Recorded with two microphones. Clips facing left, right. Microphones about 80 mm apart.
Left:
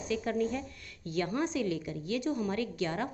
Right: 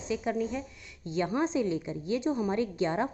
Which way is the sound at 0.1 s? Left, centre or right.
Centre.